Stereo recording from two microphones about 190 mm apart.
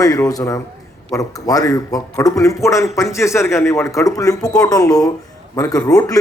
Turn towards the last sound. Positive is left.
turn(degrees=20)  # may be behind; listen again after turning